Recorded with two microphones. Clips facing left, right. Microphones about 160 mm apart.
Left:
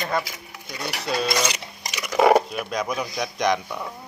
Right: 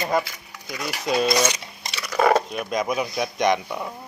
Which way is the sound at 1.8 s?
15° left (ahead or behind).